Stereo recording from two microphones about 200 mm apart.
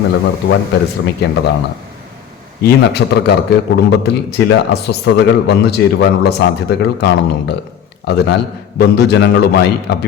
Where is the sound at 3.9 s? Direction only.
55° left (ahead or behind).